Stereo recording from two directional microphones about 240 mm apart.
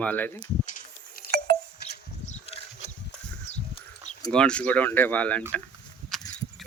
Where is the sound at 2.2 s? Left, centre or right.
Left.